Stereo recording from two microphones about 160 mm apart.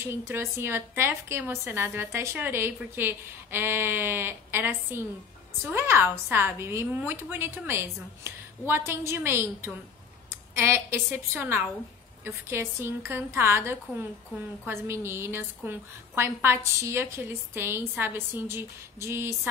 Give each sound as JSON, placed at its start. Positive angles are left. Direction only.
{"t": 0.0, "sound": "a woman's voice", "side_deg": -15}